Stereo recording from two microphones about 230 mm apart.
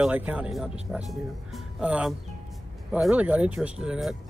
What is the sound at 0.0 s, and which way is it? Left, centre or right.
Speech, centre.